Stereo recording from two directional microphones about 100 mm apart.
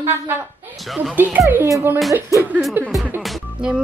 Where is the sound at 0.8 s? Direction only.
Centre (ahead or behind).